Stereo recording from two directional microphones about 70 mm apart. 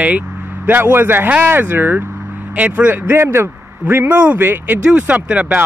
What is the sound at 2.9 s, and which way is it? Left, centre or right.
A man's voice, right.